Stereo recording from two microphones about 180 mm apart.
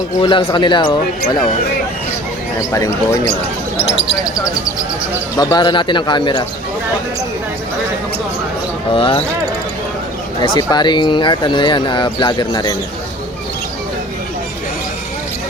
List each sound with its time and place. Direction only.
0.2 s speech: 25° left (ahead or behind)
2.6 s speech: 15° left (ahead or behind)
5.4 s speech: 20° left (ahead or behind)
8.9 s speech: 30° left (ahead or behind)
10.4 s speech: 25° left (ahead or behind)